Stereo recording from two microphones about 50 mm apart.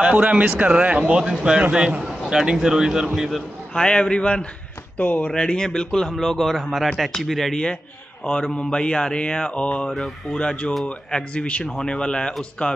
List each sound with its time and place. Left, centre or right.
0.0 s a man's voice: right; by 3.3 s centre
3.7 s mantra: centre
4.9 s speech: left
5.3 s a man's voice: centre
8.5 s mantra: centre